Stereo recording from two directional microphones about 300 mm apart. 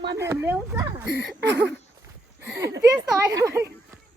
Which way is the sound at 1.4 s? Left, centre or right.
Right.